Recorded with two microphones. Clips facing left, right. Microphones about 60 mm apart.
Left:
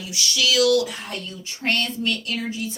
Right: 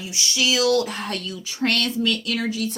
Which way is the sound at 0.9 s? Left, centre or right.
Right.